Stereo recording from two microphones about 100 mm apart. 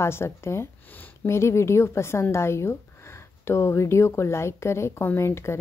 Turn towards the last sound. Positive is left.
turn(degrees=25)  # may be behind; listen again after turning